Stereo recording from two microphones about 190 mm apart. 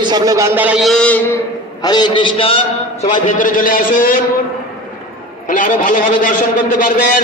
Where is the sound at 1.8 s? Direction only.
20° left (ahead or behind).